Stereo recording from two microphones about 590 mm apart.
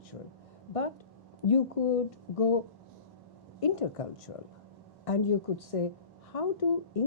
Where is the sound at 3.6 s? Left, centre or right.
Left.